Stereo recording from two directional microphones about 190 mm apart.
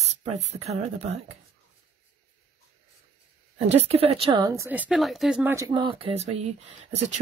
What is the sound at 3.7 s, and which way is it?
A woman's voice, 35° right (ahead or behind).